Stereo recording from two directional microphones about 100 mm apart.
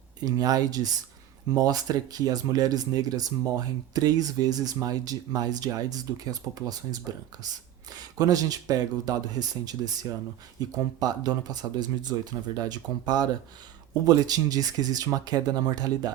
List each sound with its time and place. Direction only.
0.3 s speech: 40° right (ahead or behind)
7.9 s speech: 40° right (ahead or behind)